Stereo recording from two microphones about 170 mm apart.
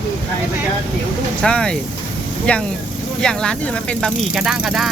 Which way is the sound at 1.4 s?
5° left (ahead or behind).